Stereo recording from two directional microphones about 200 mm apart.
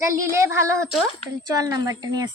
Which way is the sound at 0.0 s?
15° right (ahead or behind).